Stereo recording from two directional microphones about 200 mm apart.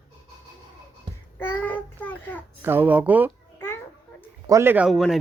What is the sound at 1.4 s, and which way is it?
Child singing, 10° left (ahead or behind).